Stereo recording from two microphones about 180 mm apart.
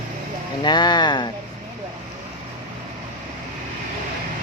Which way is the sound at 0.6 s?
25° left (ahead or behind).